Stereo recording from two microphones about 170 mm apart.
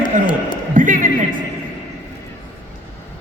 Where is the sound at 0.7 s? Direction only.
50° right (ahead or behind).